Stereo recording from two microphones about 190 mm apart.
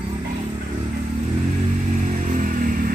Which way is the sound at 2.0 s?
40° right (ahead or behind).